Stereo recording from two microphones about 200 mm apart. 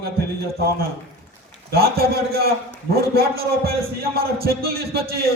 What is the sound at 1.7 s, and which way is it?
A man's voice, 50° right (ahead or behind).